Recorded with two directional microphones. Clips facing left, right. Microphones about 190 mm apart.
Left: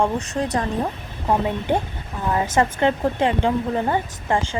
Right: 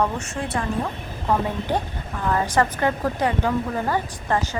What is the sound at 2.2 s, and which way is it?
Speech, 20° left (ahead or behind).